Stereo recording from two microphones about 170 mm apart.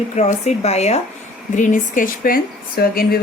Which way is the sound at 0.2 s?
40° left (ahead or behind).